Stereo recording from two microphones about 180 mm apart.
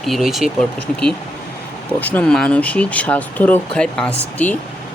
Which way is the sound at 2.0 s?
10° left (ahead or behind).